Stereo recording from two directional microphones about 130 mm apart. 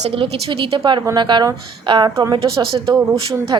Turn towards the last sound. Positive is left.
turn(degrees=-45)  # may be behind; listen again after turning